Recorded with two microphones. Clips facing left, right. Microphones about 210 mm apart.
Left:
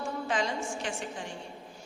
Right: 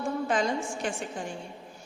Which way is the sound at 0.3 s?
50° right (ahead or behind).